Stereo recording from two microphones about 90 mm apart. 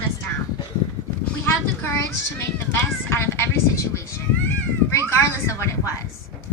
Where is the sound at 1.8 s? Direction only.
30° left (ahead or behind).